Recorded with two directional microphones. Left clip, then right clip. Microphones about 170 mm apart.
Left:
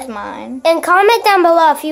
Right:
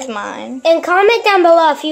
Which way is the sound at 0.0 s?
Centre (ahead or behind).